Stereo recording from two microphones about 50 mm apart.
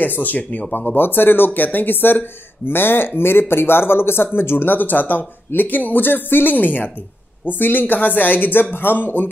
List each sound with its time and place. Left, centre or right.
0.0 s speech: left
0.7 s speech: left